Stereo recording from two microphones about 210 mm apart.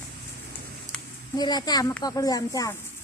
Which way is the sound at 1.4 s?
20° left (ahead or behind).